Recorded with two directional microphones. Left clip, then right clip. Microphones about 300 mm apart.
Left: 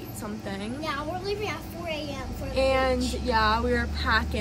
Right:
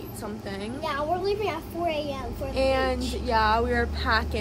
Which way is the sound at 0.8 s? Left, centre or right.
Centre.